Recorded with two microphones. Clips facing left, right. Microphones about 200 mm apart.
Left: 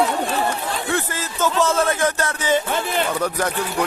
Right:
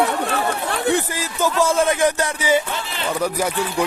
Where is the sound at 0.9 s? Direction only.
15° right (ahead or behind).